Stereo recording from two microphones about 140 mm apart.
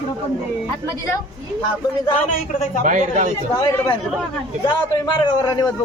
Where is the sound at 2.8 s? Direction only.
65° right (ahead or behind).